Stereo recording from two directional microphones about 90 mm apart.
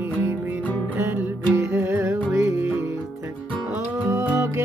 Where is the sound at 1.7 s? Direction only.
25° right (ahead or behind).